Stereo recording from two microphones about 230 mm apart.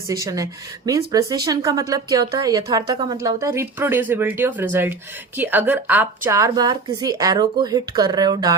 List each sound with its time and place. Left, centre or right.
0.1 s a woman's voice: centre